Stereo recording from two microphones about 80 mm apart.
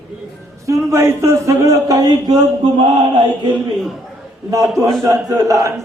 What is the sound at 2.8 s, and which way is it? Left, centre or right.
Chant, right.